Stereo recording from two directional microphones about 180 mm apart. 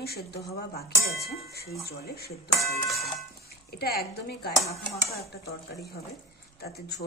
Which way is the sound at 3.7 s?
60° left (ahead or behind).